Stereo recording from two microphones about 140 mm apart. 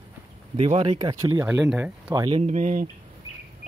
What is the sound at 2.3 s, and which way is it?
Speech, 55° right (ahead or behind).